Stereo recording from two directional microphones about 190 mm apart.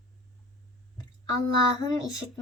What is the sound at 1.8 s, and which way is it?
Speech, 20° left (ahead or behind).